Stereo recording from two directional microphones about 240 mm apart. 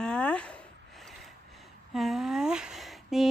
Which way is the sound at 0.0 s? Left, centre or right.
Centre.